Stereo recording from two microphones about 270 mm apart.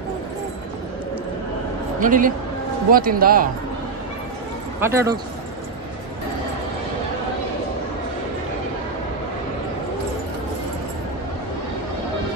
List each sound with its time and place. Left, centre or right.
2.0 s a man's voice: right
4.7 s speech: centre